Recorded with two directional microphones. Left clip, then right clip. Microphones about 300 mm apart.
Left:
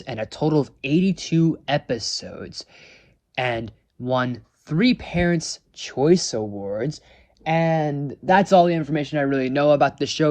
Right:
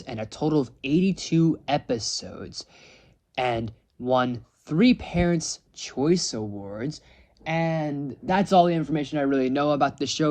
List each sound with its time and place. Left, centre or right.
0.0 s speech: centre
6.4 s speech: right
6.7 s speech: centre